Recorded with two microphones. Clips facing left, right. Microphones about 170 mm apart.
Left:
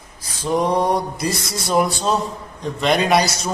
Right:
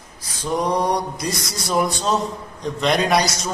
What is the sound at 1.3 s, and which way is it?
Speech, 25° left (ahead or behind).